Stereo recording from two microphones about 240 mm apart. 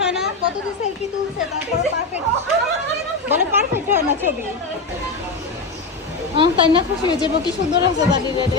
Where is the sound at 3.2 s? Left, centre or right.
Centre.